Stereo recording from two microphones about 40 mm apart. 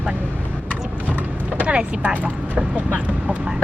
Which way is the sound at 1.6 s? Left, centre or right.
Right.